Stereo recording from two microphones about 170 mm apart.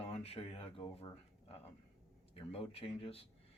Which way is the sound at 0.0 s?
35° left (ahead or behind).